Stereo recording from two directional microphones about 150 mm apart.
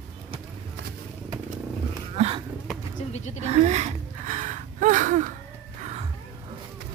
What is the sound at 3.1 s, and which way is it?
Speech, 50° left (ahead or behind).